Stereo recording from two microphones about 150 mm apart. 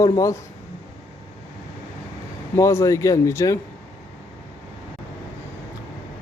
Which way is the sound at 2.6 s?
20° left (ahead or behind).